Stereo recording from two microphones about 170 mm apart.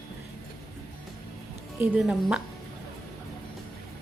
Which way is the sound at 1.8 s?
5° right (ahead or behind).